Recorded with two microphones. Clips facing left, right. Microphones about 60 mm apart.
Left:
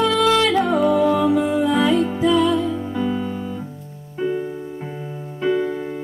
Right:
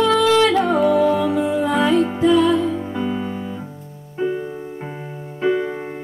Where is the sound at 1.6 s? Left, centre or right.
Right.